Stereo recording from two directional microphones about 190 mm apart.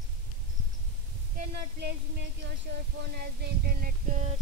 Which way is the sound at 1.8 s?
70° right (ahead or behind).